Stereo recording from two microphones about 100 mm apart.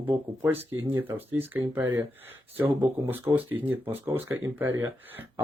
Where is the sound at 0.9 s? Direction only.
20° right (ahead or behind).